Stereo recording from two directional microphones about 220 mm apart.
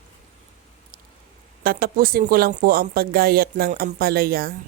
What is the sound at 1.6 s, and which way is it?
Speech, 40° right (ahead or behind).